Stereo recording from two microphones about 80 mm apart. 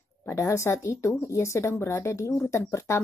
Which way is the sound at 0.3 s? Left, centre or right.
Left.